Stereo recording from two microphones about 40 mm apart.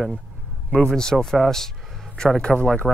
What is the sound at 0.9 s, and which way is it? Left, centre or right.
Speech, centre.